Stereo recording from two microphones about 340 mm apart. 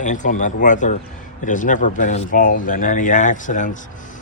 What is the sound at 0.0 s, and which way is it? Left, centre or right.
Speech, left.